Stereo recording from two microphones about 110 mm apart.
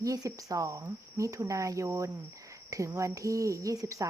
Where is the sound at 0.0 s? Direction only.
30° right (ahead or behind).